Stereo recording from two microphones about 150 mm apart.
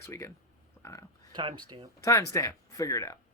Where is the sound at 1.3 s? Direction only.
30° right (ahead or behind).